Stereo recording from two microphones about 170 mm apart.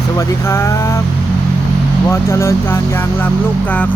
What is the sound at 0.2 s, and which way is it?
Speech, 15° left (ahead or behind).